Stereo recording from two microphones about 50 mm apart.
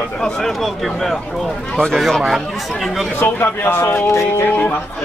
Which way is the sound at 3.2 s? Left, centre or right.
Left.